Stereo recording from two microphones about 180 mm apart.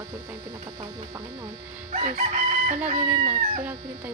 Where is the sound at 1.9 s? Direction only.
40° right (ahead or behind).